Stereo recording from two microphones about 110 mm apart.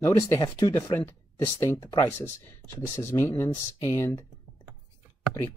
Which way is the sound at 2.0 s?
20° left (ahead or behind).